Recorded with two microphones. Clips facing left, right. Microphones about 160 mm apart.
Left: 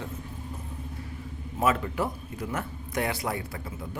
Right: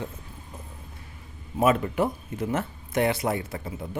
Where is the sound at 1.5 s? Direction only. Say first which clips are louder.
Right 4 dB; 20° right (ahead or behind).